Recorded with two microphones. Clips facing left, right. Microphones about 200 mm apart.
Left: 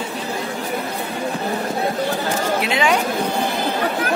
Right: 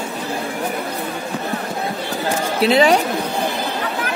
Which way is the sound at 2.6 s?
35° right (ahead or behind).